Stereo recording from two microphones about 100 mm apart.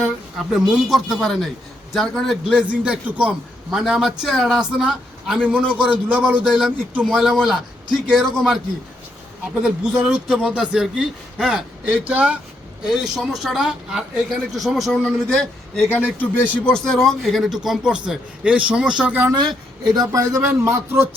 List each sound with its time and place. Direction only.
0.5 s speech: centre (ahead or behind)
2.6 s speech: 10° right (ahead or behind)
9.6 s speech: 5° right (ahead or behind)
19.3 s speech: 45° right (ahead or behind)
20.5 s a man's voice: 25° right (ahead or behind)